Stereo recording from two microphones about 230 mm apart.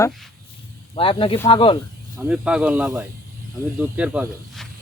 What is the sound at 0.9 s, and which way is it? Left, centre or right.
Speech, left.